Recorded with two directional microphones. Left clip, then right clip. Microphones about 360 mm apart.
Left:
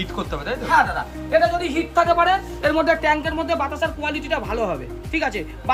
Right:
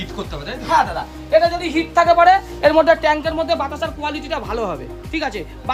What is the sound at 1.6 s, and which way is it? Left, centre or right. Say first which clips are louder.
A woman's voice: right 4 dB; right.